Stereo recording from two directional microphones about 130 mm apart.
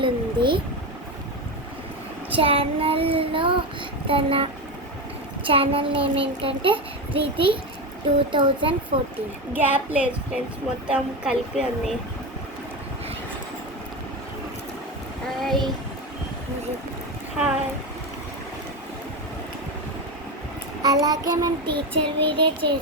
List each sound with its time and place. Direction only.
0.0 s a sound: 40° right (ahead or behind)
2.3 s a child's voice: 45° right (ahead or behind)
5.5 s a child's voice: 45° right (ahead or behind)
8.3 s child singing: 40° right (ahead or behind)
8.9 s a child's voice: 45° right (ahead or behind)
9.5 s a woman's voice: 15° right (ahead or behind)
15.4 s child singing: centre (ahead or behind)
20.8 s child singing: 30° right (ahead or behind)